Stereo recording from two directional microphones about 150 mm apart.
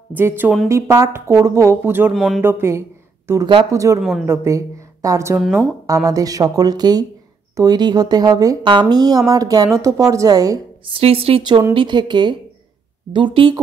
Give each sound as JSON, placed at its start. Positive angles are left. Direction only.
{"t": 0.1, "sound": "a woman's voice", "side_deg": -15}
{"t": 2.1, "sound": "speech", "side_deg": 0}
{"t": 2.4, "sound": "a woman's voice", "side_deg": -15}
{"t": 10.9, "sound": "speech", "side_deg": -40}